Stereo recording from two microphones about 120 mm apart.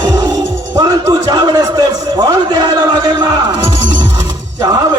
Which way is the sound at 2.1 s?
35° right (ahead or behind).